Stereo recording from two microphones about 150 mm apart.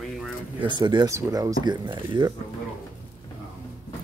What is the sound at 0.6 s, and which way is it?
Speech, 30° right (ahead or behind).